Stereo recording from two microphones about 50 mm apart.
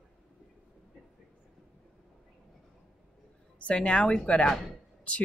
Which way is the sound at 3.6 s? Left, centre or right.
Left.